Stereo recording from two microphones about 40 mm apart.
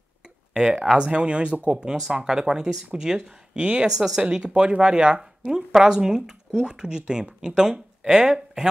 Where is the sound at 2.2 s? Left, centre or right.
Centre.